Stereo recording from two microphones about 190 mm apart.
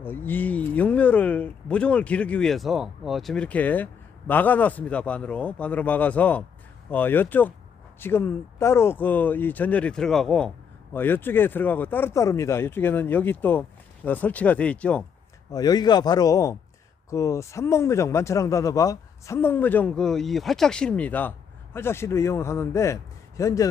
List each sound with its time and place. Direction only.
0.0 s speech: 10° left (ahead or behind)
15.5 s a man's voice: 20° left (ahead or behind)